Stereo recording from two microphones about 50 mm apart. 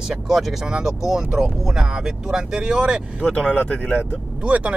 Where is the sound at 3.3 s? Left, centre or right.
Centre.